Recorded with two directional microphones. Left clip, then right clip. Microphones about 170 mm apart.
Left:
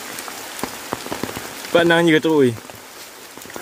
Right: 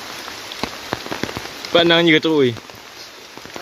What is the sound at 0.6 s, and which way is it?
Rain on surface, 20° right (ahead or behind).